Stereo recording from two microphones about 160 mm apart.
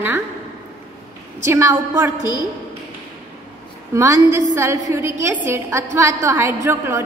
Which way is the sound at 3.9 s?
20° right (ahead or behind).